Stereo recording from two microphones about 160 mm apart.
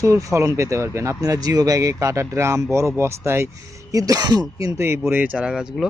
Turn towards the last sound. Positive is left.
turn(degrees=-5)  # may be behind; listen again after turning